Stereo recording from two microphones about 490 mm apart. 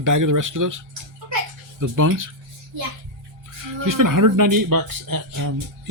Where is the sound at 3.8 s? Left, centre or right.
Right.